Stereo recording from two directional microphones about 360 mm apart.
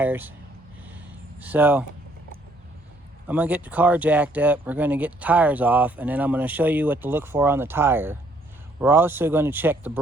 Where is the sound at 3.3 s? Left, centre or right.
Centre.